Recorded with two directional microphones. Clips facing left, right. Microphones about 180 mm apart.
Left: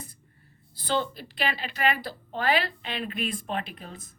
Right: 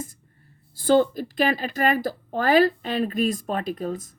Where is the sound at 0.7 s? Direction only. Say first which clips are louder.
Right 10 dB; 45° right (ahead or behind).